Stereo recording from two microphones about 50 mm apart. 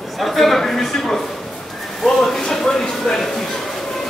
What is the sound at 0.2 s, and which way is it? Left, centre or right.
Speech, centre.